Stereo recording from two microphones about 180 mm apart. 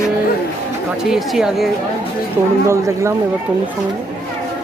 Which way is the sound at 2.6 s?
15° right (ahead or behind).